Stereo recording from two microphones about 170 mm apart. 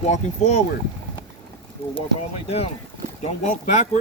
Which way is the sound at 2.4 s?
40° left (ahead or behind).